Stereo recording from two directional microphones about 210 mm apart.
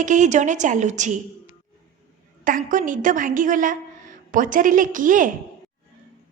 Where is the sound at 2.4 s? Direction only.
40° right (ahead or behind).